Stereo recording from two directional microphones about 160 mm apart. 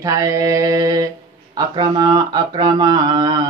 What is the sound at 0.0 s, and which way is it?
Mantra, 20° right (ahead or behind).